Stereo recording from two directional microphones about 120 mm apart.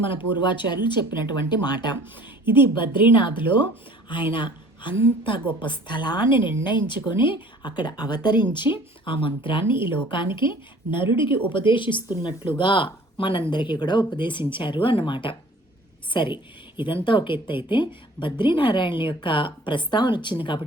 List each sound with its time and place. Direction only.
0.0 s a woman's voice: 45° left (ahead or behind)